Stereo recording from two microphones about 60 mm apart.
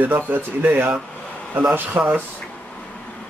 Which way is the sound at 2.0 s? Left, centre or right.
Right.